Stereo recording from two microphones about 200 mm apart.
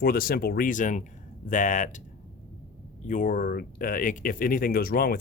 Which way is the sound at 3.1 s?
40° left (ahead or behind).